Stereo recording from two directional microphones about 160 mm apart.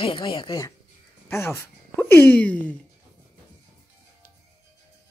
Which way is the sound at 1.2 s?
15° left (ahead or behind).